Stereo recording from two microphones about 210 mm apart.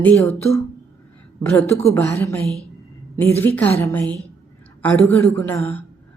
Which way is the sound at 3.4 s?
10° left (ahead or behind).